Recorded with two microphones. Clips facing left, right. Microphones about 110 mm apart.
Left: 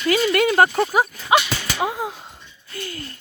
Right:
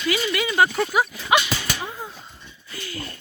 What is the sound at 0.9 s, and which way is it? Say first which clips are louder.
Speech: left 2 dB; 40° left (ahead or behind).